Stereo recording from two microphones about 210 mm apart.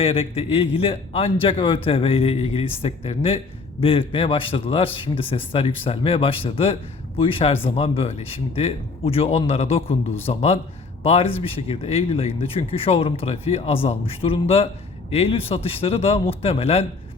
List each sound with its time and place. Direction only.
0.0 s a man's voice: 25° left (ahead or behind)